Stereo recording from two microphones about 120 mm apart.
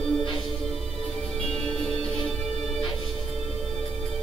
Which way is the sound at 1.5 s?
5° left (ahead or behind).